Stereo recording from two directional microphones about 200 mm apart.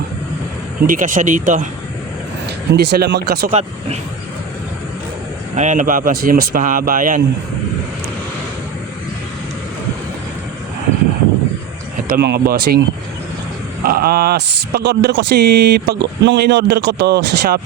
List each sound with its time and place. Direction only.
0.9 s speech: 40° right (ahead or behind)
2.7 s a man's voice: 55° right (ahead or behind)
3.5 s speech: 35° right (ahead or behind)
5.5 s a man's voice: 40° right (ahead or behind)
12.0 s a man's voice: 50° right (ahead or behind)
13.8 s speech: 50° right (ahead or behind)